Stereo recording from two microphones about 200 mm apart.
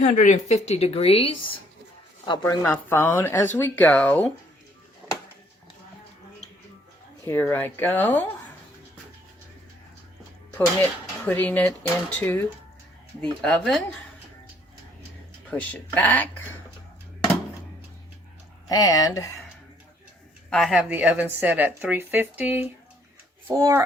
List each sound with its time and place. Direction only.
0.0 s speech: 40° left (ahead or behind)
2.4 s speech: 10° left (ahead or behind)
7.3 s speech: 10° left (ahead or behind)
11.3 s speech: 10° left (ahead or behind)
15.4 s speech: 10° left (ahead or behind)
18.7 s speech: 20° left (ahead or behind)
20.5 s speech: centre (ahead or behind)